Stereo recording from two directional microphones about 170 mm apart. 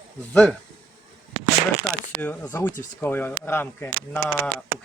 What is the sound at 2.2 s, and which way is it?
Speech, 10° left (ahead or behind).